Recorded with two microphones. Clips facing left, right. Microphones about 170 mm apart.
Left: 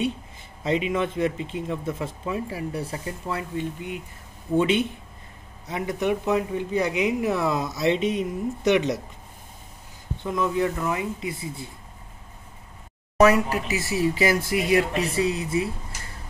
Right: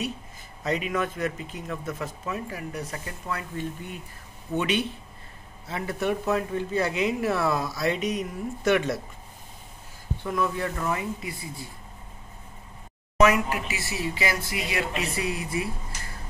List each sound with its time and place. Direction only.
0.7 s speech: 25° left (ahead or behind)
10.2 s speech: 20° left (ahead or behind)
13.2 s speech: 35° left (ahead or behind)